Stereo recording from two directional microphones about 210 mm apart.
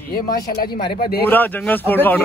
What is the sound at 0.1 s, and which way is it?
Speech, 45° left (ahead or behind).